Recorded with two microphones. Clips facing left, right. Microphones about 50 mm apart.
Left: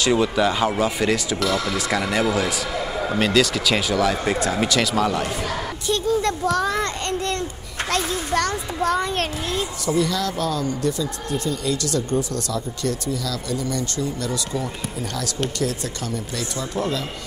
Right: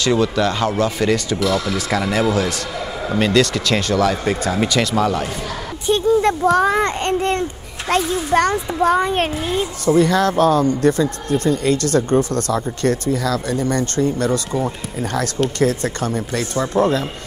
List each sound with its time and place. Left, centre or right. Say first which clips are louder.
0.0 s speech: right 2 dB; centre
5.9 s a child's voice: right 6 dB; right
9.8 s speech: right 8 dB; right